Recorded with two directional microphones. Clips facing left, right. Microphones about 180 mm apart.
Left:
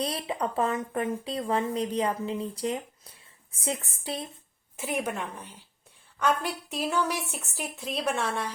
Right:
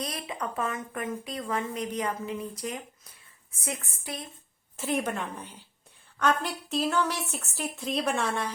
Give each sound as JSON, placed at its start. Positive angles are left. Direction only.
{"t": 0.0, "sound": "speech", "side_deg": 30}
{"t": 4.8, "sound": "a woman's voice", "side_deg": 10}